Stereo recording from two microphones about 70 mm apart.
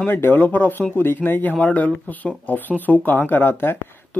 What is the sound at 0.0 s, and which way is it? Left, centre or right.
Speech, left.